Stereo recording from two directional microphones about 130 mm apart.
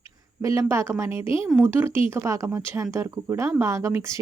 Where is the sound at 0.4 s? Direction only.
20° right (ahead or behind).